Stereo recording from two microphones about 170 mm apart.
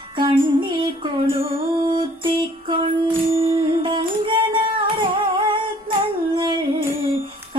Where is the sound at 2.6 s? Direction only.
30° right (ahead or behind).